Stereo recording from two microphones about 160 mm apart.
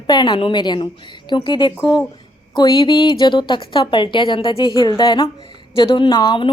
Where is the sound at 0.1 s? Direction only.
25° left (ahead or behind).